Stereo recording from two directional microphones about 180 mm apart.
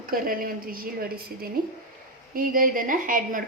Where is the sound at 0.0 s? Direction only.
50° right (ahead or behind).